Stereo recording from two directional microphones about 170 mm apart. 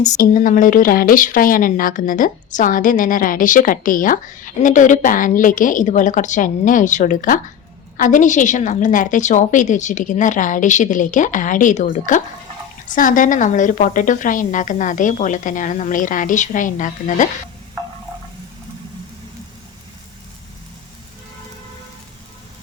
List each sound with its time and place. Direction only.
0.0 s speech: 50° left (ahead or behind)